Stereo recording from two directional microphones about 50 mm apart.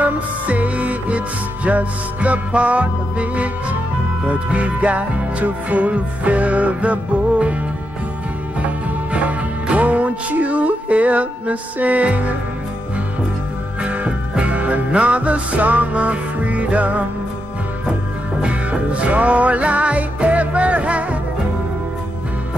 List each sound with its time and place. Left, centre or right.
0.0 s music: right
9.1 s music: right
13.8 s music: right
18.4 s music: right